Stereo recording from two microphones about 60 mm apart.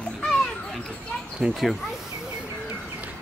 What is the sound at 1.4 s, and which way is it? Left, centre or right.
Speech, right.